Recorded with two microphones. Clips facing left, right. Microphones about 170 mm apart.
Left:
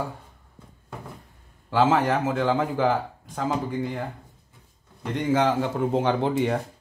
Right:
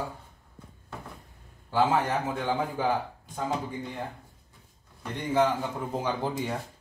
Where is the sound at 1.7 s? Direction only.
90° left.